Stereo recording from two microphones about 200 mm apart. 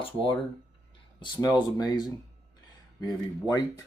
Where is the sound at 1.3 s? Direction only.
20° left (ahead or behind).